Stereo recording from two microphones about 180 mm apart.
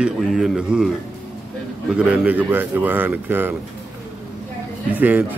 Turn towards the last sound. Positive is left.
turn(degrees=-10)  # may be behind; listen again after turning